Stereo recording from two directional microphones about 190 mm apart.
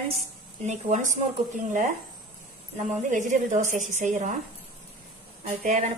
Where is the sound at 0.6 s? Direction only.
40° right (ahead or behind).